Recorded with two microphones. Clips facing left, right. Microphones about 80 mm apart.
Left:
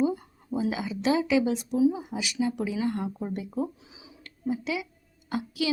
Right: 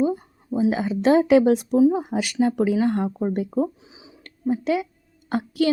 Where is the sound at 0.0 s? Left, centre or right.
Right.